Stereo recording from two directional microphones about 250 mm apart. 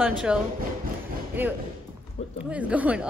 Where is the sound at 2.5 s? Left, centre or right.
Centre.